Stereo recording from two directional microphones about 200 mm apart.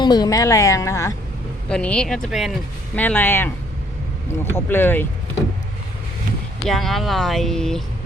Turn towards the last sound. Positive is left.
turn(degrees=0)  # may be behind; listen again after turning